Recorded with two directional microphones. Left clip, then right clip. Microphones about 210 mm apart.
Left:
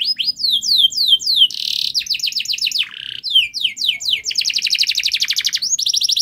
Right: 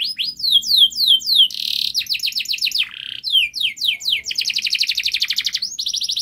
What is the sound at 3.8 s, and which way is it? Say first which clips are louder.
Chirp: left 2 dB; 5° left (ahead or behind).